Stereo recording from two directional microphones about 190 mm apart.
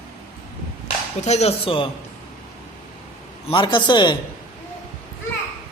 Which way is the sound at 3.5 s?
25° left (ahead or behind).